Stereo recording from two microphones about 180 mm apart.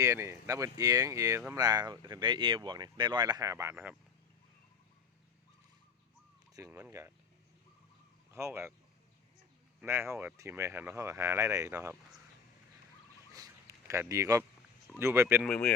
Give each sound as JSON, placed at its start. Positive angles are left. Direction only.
{"t": 0.0, "sound": "speech", "side_deg": -15}
{"t": 6.5, "sound": "speech", "side_deg": -20}
{"t": 8.3, "sound": "speech", "side_deg": -15}
{"t": 9.8, "sound": "speech", "side_deg": -15}
{"t": 13.3, "sound": "a sound", "side_deg": -20}
{"t": 14.9, "sound": "speech", "side_deg": -15}
{"t": 15.4, "sound": "speech", "side_deg": 5}